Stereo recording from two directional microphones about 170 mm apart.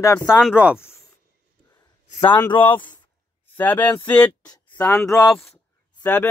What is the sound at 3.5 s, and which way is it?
Speech, 10° left (ahead or behind).